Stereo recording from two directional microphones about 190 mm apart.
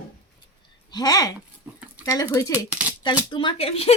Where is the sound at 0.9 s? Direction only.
20° left (ahead or behind).